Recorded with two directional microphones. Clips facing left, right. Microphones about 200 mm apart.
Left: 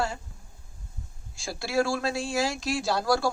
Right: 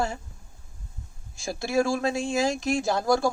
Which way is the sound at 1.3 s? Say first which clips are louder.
Right 2 dB; 20° right (ahead or behind).